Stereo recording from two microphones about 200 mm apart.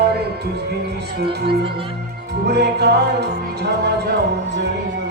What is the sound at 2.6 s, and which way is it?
Music, 55° right (ahead or behind).